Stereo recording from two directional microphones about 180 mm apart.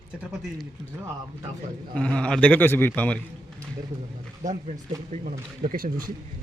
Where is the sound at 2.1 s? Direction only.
5° left (ahead or behind).